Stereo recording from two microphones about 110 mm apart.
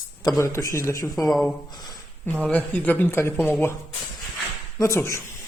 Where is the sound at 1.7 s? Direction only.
40° left (ahead or behind).